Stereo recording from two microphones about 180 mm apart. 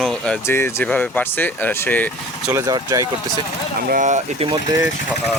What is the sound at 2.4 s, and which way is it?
Speech, 15° right (ahead or behind).